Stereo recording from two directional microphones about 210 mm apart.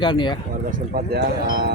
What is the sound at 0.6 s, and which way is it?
Speech, 45° right (ahead or behind).